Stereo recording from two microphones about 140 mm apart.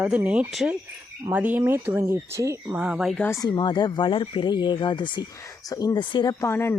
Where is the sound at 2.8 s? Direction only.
5° right (ahead or behind).